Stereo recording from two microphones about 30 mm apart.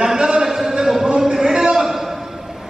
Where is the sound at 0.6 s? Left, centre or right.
Centre.